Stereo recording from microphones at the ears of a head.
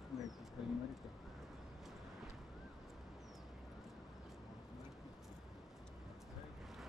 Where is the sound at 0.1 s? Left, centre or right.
Left.